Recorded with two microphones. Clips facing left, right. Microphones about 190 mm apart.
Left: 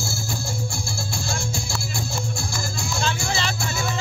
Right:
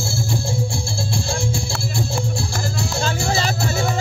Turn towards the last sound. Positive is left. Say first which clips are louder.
# right 4 dB
turn(degrees=-40)  # may be behind; listen again after turning